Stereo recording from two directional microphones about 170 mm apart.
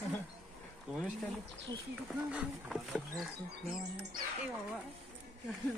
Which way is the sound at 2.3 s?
5° right (ahead or behind).